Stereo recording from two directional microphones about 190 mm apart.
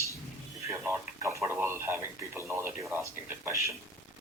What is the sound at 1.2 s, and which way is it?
Speech, 15° right (ahead or behind).